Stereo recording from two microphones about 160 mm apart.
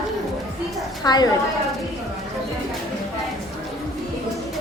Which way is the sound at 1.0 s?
25° left (ahead or behind).